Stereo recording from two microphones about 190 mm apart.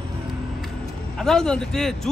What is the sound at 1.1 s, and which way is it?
Speech, 5° left (ahead or behind).